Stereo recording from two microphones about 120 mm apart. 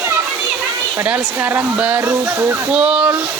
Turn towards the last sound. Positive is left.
turn(degrees=-10)  # may be behind; listen again after turning